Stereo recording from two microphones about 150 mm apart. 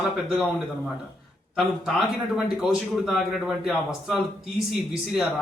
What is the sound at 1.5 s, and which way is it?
Speech, centre (ahead or behind).